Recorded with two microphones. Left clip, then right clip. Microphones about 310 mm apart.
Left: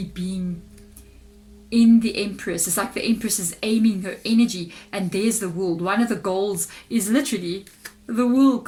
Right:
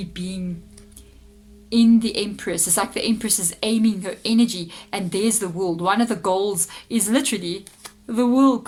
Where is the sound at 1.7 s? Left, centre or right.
Centre.